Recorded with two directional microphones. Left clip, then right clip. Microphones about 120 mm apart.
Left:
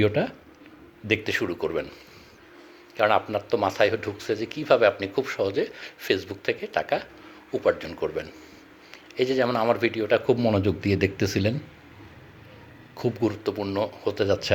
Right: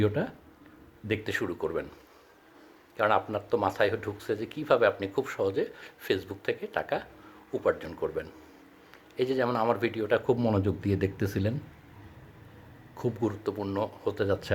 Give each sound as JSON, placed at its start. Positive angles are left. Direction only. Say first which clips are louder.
{"t": 0.0, "sound": "speech", "louder": "left 6 dB", "side_deg": -5}
{"t": 3.0, "sound": "speech", "louder": "left 4 dB", "side_deg": -5}
{"t": 10.6, "sound": "speech", "louder": "left 5 dB", "side_deg": 0}
{"t": 13.0, "sound": "speech", "louder": "left 5 dB", "side_deg": -10}